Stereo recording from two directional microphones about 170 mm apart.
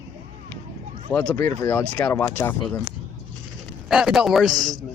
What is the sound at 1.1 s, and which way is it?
Speech, 10° left (ahead or behind).